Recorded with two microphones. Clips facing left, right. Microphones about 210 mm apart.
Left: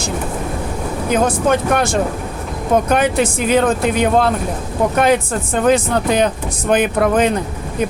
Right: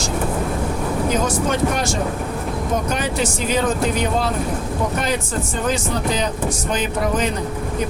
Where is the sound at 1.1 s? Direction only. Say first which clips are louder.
Left 9 dB; 55° left (ahead or behind).